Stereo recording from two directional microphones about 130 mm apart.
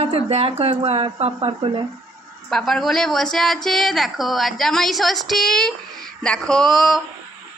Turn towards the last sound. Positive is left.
turn(degrees=5)  # may be behind; listen again after turning